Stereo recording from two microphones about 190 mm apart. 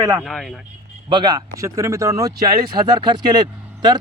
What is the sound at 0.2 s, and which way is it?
Speech, centre (ahead or behind).